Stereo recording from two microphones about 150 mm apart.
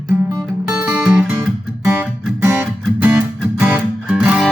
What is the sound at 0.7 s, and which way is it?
Music, 5° right (ahead or behind).